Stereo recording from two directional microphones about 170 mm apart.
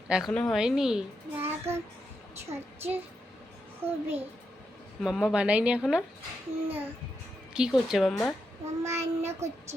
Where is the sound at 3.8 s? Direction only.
10° right (ahead or behind).